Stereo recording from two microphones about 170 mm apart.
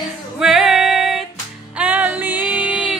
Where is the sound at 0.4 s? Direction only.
Centre (ahead or behind).